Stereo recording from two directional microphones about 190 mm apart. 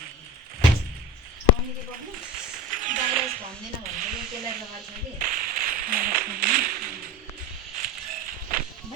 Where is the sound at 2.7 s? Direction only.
45° right (ahead or behind).